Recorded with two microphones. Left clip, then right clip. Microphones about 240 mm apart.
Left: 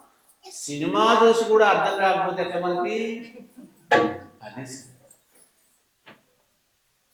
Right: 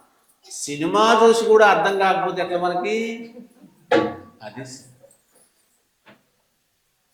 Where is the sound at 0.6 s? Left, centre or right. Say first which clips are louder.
Right 3 dB; right.